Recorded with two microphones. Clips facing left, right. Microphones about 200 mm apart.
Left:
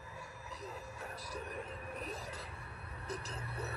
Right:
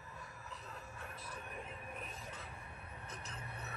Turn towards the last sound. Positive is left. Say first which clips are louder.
# left 6 dB
turn(degrees=35)  # may be behind; listen again after turning